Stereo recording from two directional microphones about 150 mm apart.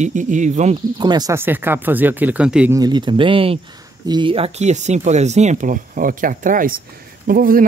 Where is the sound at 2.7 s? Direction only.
30° right (ahead or behind).